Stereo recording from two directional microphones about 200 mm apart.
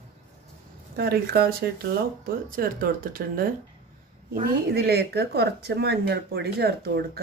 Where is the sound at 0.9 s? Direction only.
55° right (ahead or behind).